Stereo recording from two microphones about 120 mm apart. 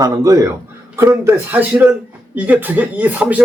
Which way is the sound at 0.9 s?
20° right (ahead or behind).